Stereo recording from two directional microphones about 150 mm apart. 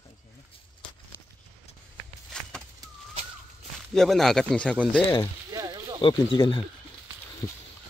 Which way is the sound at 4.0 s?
Centre (ahead or behind).